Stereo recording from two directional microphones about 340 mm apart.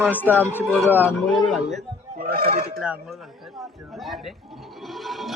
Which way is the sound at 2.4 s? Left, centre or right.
Right.